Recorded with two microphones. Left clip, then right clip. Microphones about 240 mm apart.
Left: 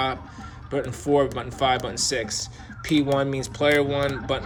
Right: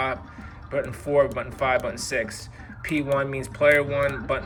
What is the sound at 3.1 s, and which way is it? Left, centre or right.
Speech, centre.